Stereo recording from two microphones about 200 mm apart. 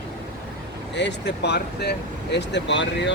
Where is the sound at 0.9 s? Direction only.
60° left (ahead or behind).